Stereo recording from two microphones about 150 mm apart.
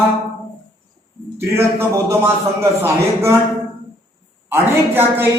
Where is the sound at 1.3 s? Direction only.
15° right (ahead or behind).